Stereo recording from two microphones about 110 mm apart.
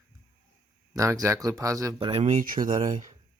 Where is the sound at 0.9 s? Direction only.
30° right (ahead or behind).